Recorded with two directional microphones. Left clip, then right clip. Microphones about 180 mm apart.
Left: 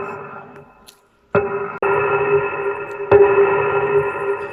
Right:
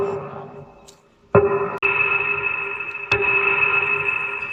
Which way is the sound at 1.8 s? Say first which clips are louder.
Left 3 dB; 40° left (ahead or behind).